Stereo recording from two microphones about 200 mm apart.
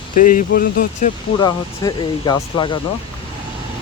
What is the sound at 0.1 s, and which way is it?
Speech, 40° left (ahead or behind).